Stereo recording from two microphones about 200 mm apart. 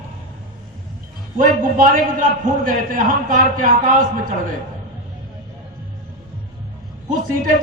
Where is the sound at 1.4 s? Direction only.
45° right (ahead or behind).